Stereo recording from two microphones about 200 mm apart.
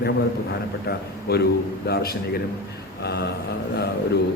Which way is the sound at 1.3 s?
55° left (ahead or behind).